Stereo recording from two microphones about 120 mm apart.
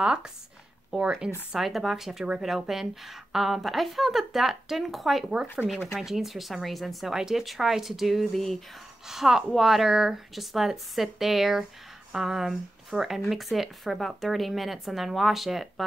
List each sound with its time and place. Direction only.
0.0 s speech: 5° right (ahead or behind)
5.7 s speech: 20° left (ahead or behind)
5.9 s speech: centre (ahead or behind)